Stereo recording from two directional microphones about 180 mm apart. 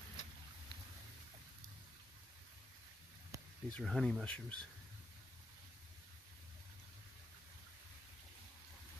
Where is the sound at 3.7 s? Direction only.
Centre (ahead or behind).